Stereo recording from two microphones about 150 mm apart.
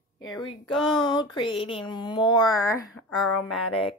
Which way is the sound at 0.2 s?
30° left (ahead or behind).